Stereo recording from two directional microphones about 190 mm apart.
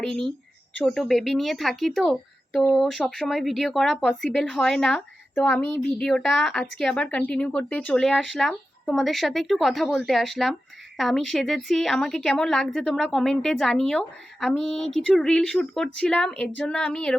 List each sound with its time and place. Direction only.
0.0 s speech: centre (ahead or behind)